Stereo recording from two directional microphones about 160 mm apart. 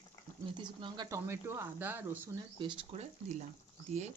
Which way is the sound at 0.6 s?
25° right (ahead or behind).